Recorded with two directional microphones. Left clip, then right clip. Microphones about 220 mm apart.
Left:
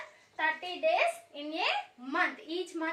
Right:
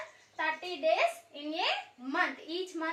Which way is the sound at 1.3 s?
15° left (ahead or behind).